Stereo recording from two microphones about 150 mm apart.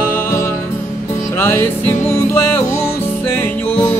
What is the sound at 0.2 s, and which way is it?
Music, 15° left (ahead or behind).